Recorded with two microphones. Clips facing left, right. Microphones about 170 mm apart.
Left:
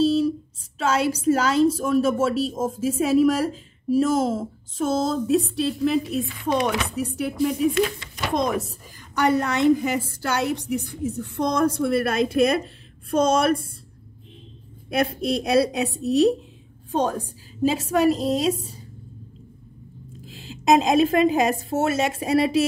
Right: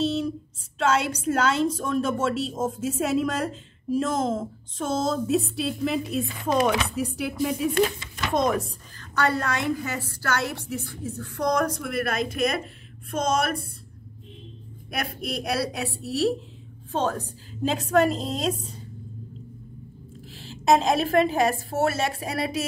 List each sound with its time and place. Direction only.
0.7 s a woman's voice: 5° left (ahead or behind)
8.9 s a woman's voice: 15° left (ahead or behind)
14.9 s a woman's voice: 25° left (ahead or behind); by 18.8 s 5° left (ahead or behind)
20.3 s a woman's voice: 15° left (ahead or behind)